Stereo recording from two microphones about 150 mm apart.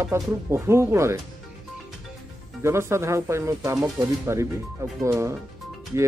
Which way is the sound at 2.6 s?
20° right (ahead or behind).